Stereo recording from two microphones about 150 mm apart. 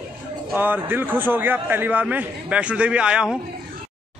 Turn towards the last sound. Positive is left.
turn(degrees=-5)  # may be behind; listen again after turning